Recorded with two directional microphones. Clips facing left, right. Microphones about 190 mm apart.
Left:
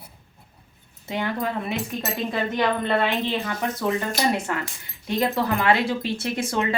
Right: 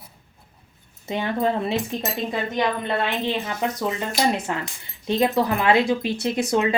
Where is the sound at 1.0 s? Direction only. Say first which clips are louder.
Right 4 dB; 20° right (ahead or behind).